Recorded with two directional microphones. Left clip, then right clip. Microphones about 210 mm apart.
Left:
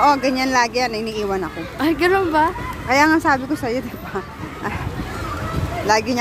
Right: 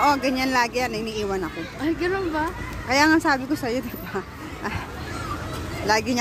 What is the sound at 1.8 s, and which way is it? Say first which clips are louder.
Speech: left 8 dB; 55° left (ahead or behind).